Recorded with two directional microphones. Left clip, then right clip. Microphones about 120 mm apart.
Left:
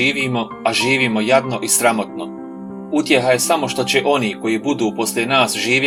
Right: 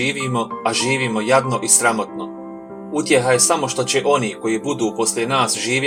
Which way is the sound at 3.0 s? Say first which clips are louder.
Even; 35° left (ahead or behind).